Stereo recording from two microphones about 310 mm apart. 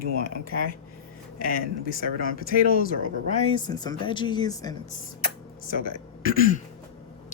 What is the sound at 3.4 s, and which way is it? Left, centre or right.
Speech, centre.